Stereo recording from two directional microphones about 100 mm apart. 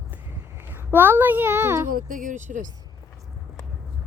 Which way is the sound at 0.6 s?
20° right (ahead or behind).